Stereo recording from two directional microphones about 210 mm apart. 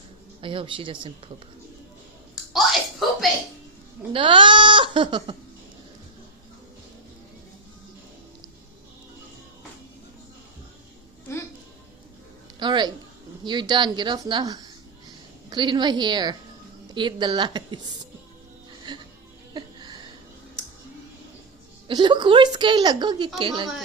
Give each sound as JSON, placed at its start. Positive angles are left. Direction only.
{"t": 0.4, "sound": "a woman's voice", "side_deg": -25}
{"t": 2.3, "sound": "bathtub", "side_deg": 0}
{"t": 4.1, "sound": "speech", "side_deg": -25}
{"t": 12.5, "sound": "a woman's voice", "side_deg": -20}
{"t": 18.8, "sound": "music", "side_deg": -20}
{"t": 19.5, "sound": "a sound", "side_deg": -20}
{"t": 21.8, "sound": "a woman's voice", "side_deg": -20}